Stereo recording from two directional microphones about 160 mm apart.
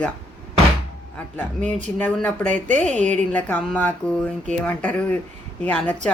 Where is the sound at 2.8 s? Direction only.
10° left (ahead or behind).